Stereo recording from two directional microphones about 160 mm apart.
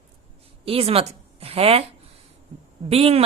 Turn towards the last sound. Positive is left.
turn(degrees=-40)  # may be behind; listen again after turning